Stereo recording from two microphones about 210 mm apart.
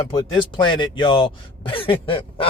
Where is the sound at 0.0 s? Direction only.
15° left (ahead or behind).